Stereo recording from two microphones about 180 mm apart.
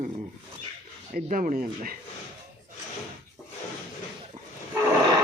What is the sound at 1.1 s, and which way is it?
Speech, 50° right (ahead or behind).